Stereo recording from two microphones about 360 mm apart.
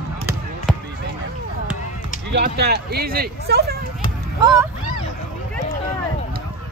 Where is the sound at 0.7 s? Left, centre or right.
Centre.